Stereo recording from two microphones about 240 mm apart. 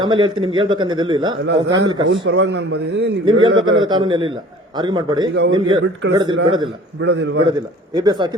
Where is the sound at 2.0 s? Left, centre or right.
Right.